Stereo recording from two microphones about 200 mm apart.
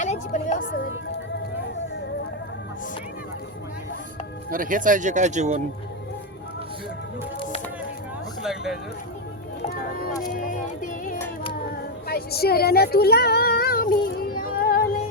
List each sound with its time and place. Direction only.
0.0 s music: 35° left (ahead or behind)
4.5 s speech: 45° right (ahead or behind)
8.4 s a sound: centre (ahead or behind)
9.6 s a sound: 45° left (ahead or behind)
10.3 s music: 40° left (ahead or behind)
12.0 s speech: 50° left (ahead or behind)
14.3 s music: 45° left (ahead or behind)